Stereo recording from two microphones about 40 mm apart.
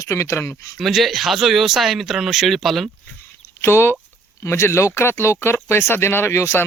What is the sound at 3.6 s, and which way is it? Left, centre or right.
Speech, left.